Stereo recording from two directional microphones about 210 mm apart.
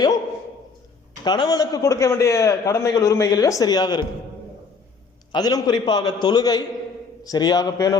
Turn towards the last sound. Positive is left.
turn(degrees=15)  # may be behind; listen again after turning